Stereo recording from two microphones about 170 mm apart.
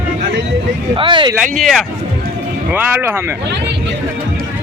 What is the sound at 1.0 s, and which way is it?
Speech, 30° right (ahead or behind).